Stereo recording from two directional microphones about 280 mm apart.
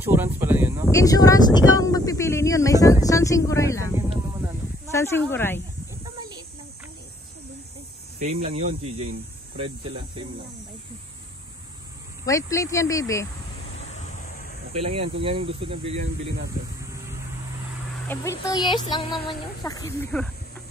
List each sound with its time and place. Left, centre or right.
0.0 s a sound: centre
0.9 s speech: centre
1.8 s a sound: centre
4.1 s a sound: centre
4.9 s speech: centre
8.2 s speech: right
12.3 s speech: centre
13.8 s waves: left
14.7 s speech: right
18.0 s speech: centre